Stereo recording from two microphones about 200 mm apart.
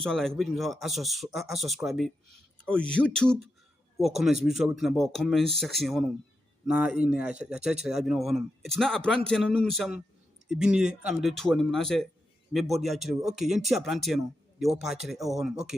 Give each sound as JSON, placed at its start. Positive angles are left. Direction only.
{"t": 0.0, "sound": "a man's voice", "side_deg": 5}